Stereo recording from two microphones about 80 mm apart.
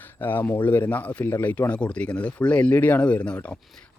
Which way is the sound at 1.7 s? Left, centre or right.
Centre.